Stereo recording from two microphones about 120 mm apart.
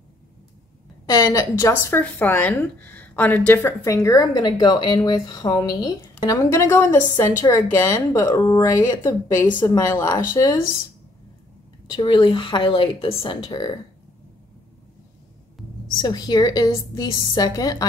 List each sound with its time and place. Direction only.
1.0 s speech: 30° left (ahead or behind)
11.9 s speech: 40° left (ahead or behind)
16.0 s a woman's voice: 35° left (ahead or behind)